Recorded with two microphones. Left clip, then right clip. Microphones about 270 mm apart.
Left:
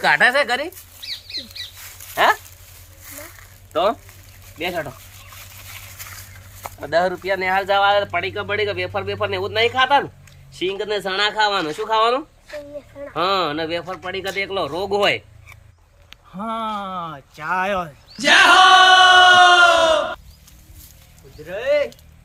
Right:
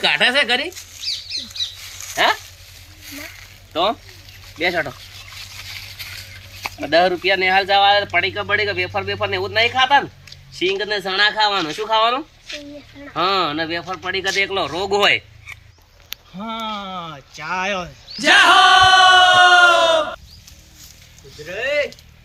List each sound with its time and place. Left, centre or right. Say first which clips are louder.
0.0 s speech: left 1 dB; centre
2.1 s speech: left 1 dB; centre
3.2 s a sound: right 4 dB; left
4.5 s speech: right 5 dB; centre
6.6 s speech: right 4 dB; left; by 20.0 s centre
21.4 s speech: left 1 dB; centre